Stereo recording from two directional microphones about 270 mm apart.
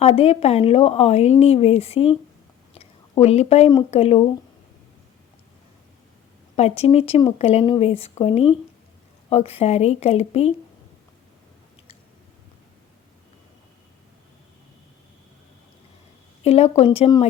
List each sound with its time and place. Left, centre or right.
0.0 s a woman's voice: left
6.6 s a woman's voice: left
16.4 s a woman's voice: left